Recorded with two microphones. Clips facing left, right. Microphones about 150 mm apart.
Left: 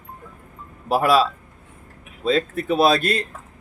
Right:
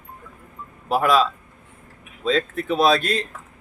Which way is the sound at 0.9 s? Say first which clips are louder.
Left 1 dB; 5° left (ahead or behind).